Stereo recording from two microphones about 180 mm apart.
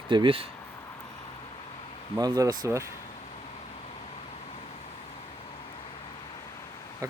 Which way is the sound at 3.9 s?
35° left (ahead or behind).